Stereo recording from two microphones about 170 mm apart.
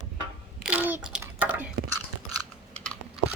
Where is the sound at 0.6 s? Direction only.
10° right (ahead or behind).